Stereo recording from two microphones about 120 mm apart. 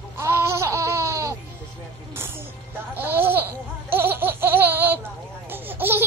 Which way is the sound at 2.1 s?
20° right (ahead or behind).